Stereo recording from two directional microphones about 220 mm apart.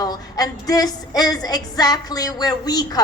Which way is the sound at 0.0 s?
15° left (ahead or behind).